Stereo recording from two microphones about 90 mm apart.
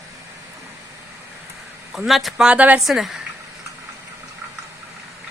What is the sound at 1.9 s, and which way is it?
Speech, centre (ahead or behind).